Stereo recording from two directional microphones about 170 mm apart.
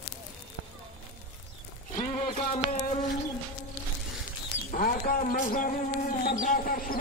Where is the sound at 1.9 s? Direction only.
40° left (ahead or behind).